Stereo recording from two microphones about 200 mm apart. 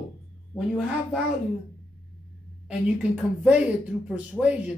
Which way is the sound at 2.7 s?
5° right (ahead or behind).